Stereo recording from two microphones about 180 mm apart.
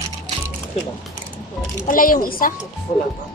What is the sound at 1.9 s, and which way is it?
Speech, 50° left (ahead or behind).